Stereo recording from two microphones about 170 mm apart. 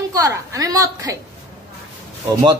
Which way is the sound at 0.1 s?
20° right (ahead or behind).